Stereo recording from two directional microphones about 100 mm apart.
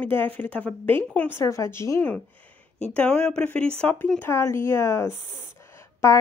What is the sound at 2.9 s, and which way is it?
Speech, 10° left (ahead or behind).